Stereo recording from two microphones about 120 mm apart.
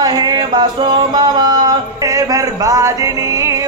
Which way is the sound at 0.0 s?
35° right (ahead or behind).